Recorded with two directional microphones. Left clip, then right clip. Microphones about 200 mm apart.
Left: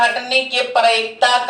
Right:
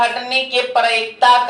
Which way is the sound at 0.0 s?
15° left (ahead or behind).